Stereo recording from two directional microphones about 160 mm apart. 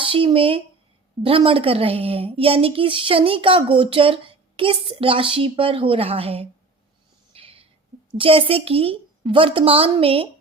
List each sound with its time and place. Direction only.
0.0 s speech: 35° right (ahead or behind)
7.3 s a sound: 35° right (ahead or behind)
8.2 s speech: 35° right (ahead or behind)